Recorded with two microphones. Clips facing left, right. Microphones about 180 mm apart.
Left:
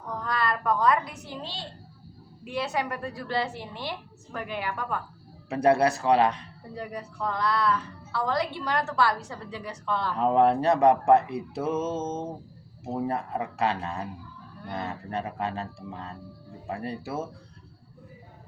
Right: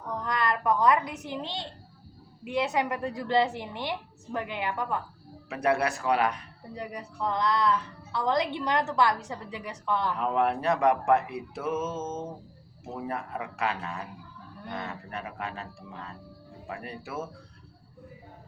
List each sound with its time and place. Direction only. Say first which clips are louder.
0.3 s a woman's voice: even; 15° right (ahead or behind)
5.5 s speech: left 5 dB; 30° left (ahead or behind)
6.7 s a woman's voice: left 1 dB; 20° right (ahead or behind)
10.2 s speech: left 10 dB; 30° left (ahead or behind)